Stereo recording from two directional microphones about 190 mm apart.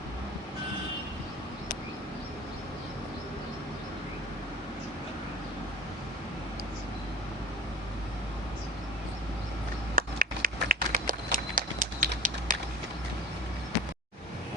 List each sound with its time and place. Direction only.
9.9 s run: 45° right (ahead or behind)